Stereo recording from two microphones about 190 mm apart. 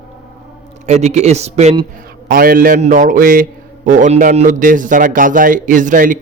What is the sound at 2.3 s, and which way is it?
A man's voice, 50° right (ahead or behind).